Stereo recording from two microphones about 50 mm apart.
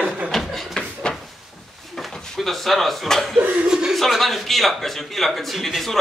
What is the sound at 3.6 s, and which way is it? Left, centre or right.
Chuckle, centre.